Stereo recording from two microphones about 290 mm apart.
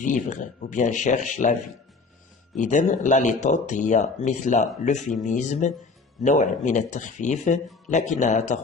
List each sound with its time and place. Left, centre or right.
0.0 s speech: left
2.6 s speech: left
4.9 s speech: centre
5.2 s speech: left